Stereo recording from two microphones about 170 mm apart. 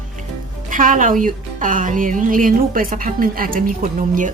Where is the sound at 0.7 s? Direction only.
50° right (ahead or behind).